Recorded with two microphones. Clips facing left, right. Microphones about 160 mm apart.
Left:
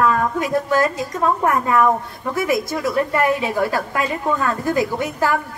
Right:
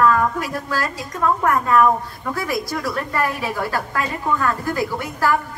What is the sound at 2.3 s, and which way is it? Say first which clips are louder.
A woman's voice: left 5 dB; 20° left (ahead or behind).